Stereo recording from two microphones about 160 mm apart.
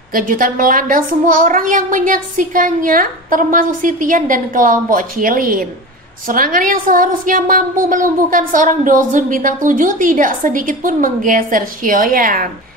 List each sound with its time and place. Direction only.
0.1 s a woman's voice: 60° right (ahead or behind)